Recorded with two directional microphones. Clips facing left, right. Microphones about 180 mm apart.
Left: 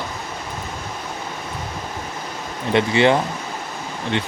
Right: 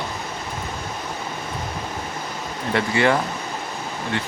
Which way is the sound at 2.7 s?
20° left (ahead or behind).